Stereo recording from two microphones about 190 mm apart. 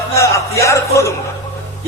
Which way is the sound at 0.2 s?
15° left (ahead or behind).